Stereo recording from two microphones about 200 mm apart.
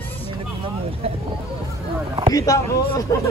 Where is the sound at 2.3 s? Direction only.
15° left (ahead or behind).